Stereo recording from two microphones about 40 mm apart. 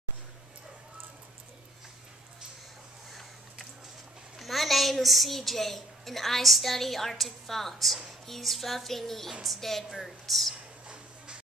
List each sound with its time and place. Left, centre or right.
4.4 s a woman's voice: centre
9.3 s a woman's voice: centre
9.6 s a woman's voice: centre